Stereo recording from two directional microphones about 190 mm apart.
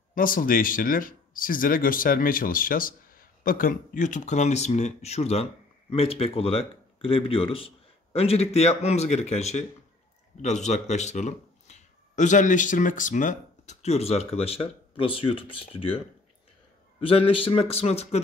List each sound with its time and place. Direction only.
0.1 s speech: 45° left (ahead or behind); by 16.0 s 30° left (ahead or behind)
17.0 s speech: 30° left (ahead or behind)